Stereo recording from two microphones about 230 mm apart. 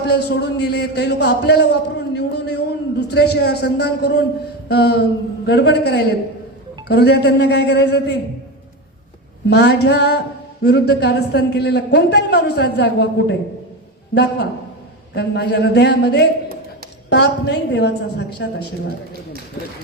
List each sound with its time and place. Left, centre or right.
0.1 s a man's voice: left
9.5 s a man's voice: left